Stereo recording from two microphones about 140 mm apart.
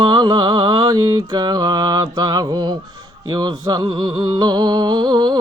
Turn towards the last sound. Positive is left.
turn(degrees=-30)  # may be behind; listen again after turning